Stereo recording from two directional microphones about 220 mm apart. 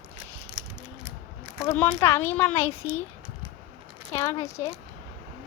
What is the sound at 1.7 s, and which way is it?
Speech, 10° left (ahead or behind).